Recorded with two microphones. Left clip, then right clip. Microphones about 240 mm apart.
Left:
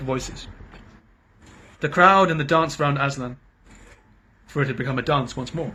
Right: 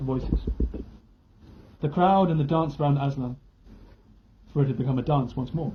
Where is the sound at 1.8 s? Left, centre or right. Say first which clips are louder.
Left 6 dB; left.